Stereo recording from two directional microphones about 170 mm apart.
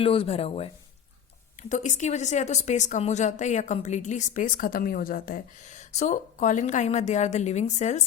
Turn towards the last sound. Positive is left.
turn(degrees=40)  # may be behind; listen again after turning